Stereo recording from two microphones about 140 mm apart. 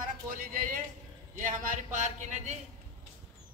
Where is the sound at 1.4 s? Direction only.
65° right (ahead or behind).